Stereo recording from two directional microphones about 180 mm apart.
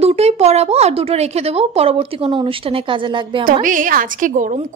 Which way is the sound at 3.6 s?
45° right (ahead or behind).